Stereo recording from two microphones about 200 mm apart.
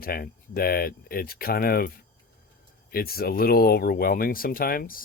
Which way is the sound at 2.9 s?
50° left (ahead or behind).